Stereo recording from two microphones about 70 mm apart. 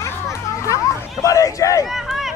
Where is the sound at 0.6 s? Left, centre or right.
Left.